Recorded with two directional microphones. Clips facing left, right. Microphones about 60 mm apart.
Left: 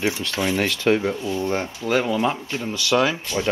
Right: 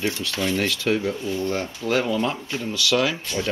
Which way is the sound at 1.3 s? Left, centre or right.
Left.